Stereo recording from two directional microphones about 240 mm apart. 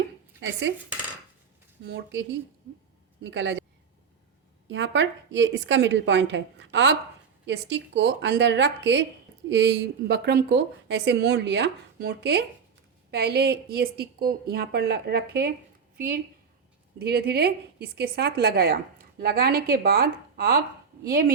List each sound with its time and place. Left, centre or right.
0.3 s speech: right
1.8 s speech: right
3.2 s speech: right
4.7 s a woman's voice: right